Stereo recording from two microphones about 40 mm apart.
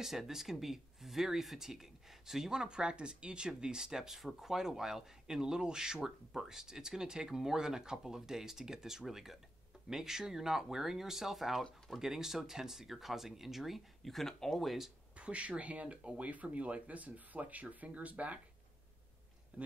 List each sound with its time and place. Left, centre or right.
0.0 s speech: centre
15.1 s speech: right
19.5 s speech: right